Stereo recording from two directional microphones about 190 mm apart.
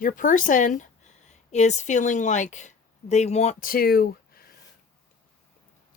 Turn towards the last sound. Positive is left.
turn(degrees=55)  # may be behind; listen again after turning